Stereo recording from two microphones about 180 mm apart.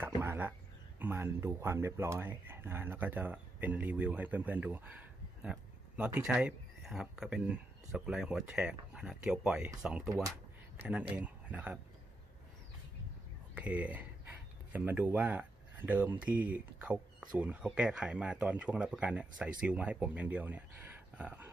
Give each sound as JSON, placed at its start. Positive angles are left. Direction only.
{"t": 0.0, "sound": "speech", "side_deg": -10}
{"t": 10.8, "sound": "speech", "side_deg": -10}
{"t": 13.6, "sound": "speech", "side_deg": -10}